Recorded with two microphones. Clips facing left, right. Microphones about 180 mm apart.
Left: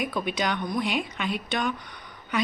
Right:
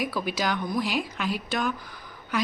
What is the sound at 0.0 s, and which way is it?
Speech, 5° right (ahead or behind).